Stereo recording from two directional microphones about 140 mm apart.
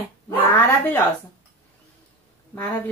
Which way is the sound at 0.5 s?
15° left (ahead or behind).